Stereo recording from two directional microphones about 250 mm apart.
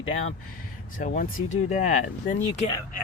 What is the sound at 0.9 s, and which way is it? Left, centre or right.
Speech, left.